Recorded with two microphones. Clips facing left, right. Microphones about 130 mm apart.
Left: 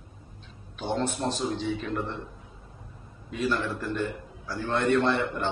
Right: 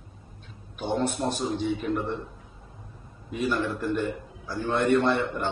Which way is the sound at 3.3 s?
15° right (ahead or behind).